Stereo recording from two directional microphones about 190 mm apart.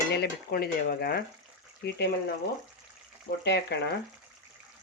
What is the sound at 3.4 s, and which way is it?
Stir, 60° left (ahead or behind).